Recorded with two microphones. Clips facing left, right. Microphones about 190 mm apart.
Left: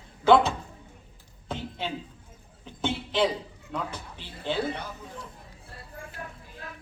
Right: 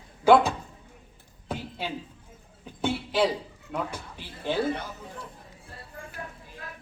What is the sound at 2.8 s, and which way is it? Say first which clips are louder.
Speech: right 1 dB; 10° right (ahead or behind).